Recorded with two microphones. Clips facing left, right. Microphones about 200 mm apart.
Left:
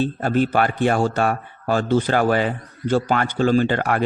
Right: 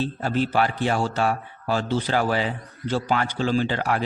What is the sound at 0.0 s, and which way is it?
Speech, 55° left (ahead or behind).